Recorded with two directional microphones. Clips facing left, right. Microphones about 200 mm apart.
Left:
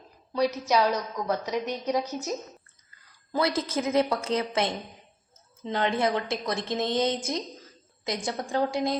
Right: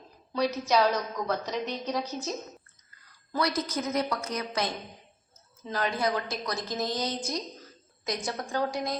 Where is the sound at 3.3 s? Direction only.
25° left (ahead or behind).